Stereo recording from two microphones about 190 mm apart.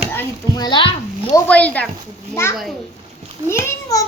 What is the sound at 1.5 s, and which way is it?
A child's voice, 5° left (ahead or behind).